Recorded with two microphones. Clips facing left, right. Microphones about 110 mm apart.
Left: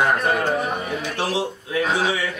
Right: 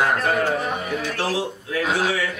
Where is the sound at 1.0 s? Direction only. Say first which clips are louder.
Left 1 dB; 15° left (ahead or behind).